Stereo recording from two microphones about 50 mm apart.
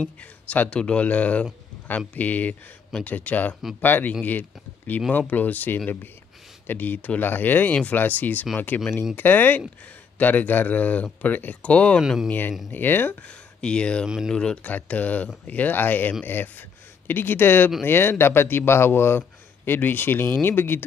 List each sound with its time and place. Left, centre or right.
0.2 s speech: left
7.7 s speech: left
11.7 s speech: left
12.3 s a man's voice: left
13.3 s speech: centre
14.0 s speech: centre
14.3 s speech: centre
14.6 s a man's voice: left